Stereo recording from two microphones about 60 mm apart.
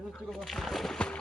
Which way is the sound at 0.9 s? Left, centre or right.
Centre.